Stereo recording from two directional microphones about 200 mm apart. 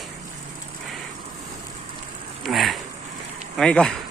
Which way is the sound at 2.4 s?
Centre (ahead or behind).